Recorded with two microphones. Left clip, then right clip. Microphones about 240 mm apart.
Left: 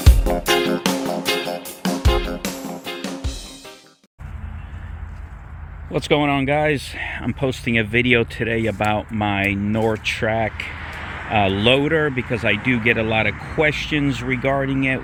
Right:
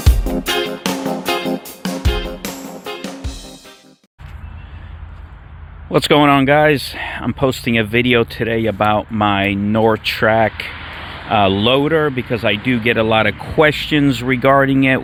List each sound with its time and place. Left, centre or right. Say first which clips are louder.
0.0 s music: even; centre
5.9 s speech: right 7 dB; right
10.8 s a sound: right 1 dB; right
11.3 s speech: right 3 dB; right